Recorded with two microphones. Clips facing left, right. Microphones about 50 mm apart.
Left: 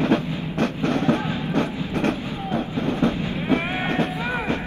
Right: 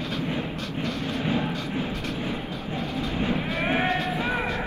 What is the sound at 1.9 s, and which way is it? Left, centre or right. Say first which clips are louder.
Vehicle: left 8 dB; left.